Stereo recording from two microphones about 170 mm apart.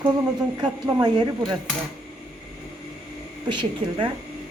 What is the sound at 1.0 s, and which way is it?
Speech, 25° right (ahead or behind).